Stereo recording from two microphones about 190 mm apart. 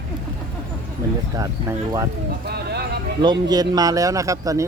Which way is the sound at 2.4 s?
60° right (ahead or behind).